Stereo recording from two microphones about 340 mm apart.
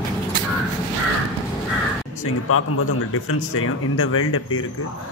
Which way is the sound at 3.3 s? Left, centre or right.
Left.